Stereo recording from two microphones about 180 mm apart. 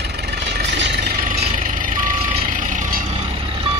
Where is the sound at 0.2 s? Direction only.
65° right (ahead or behind).